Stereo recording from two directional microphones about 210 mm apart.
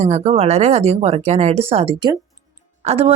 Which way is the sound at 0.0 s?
30° right (ahead or behind).